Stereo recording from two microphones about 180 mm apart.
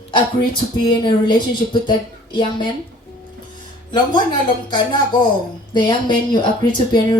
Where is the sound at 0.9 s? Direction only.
25° left (ahead or behind).